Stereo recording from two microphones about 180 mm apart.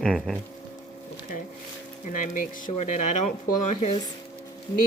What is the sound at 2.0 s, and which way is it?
Speech, 45° left (ahead or behind).